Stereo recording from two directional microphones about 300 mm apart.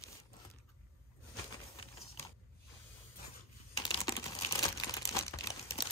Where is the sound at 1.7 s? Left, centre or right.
Centre.